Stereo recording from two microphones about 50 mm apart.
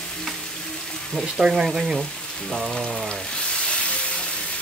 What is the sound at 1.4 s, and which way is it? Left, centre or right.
Speech, centre.